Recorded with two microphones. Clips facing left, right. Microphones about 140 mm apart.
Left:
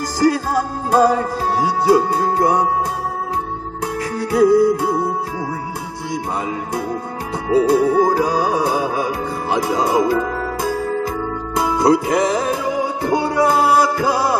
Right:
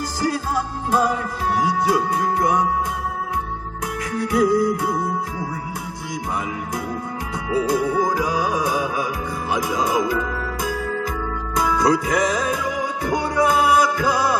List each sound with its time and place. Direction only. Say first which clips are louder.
0.2 s music: left 7 dB; 45° left (ahead or behind)
4.1 s music: left 5 dB; 30° left (ahead or behind)
7.7 s music: left 4 dB; 30° left (ahead or behind)